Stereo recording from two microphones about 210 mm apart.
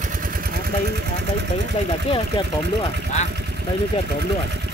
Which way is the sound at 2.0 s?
25° left (ahead or behind).